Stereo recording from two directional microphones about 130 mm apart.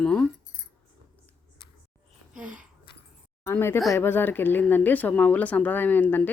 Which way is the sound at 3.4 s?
20° left (ahead or behind).